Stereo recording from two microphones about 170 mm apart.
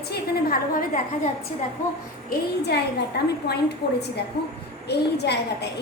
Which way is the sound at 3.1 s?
80° left.